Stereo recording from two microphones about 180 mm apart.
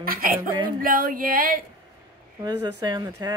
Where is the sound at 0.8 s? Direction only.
50° right (ahead or behind).